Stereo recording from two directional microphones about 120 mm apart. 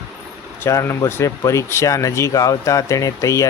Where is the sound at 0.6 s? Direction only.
20° left (ahead or behind).